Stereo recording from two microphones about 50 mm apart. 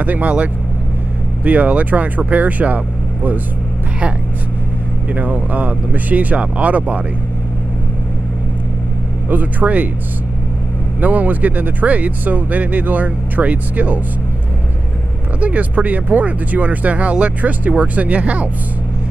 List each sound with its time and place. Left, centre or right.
0.0 s speech: right
5.1 s speech: right
9.3 s speech: right
11.0 s speech: right
15.4 s speech: right